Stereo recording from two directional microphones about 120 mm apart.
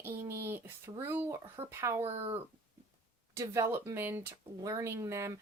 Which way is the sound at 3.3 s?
25° right (ahead or behind).